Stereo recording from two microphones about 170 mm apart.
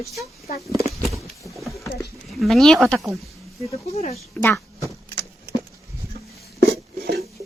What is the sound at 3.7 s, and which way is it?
Speech, 35° left (ahead or behind).